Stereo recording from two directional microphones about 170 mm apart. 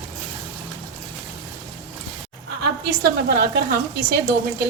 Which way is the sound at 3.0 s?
65° right (ahead or behind).